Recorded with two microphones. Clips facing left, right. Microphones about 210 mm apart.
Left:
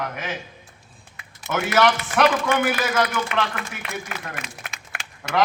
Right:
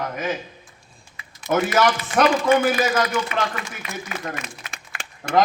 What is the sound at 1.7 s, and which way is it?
Speech, 70° left (ahead or behind).